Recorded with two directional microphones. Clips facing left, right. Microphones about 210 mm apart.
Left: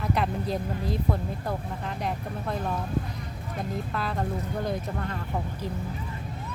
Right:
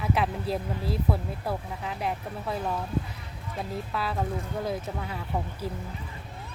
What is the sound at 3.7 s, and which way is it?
Speech, 5° right (ahead or behind).